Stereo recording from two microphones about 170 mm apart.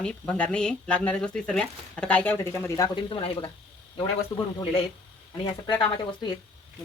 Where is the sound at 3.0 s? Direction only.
30° left (ahead or behind).